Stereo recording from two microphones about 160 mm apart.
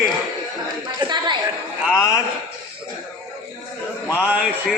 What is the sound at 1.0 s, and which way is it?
Speech, 30° right (ahead or behind).